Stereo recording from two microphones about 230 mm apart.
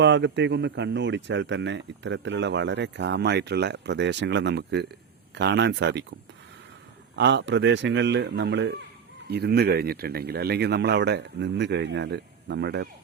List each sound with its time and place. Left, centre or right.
0.0 s speech: right
7.2 s speech: right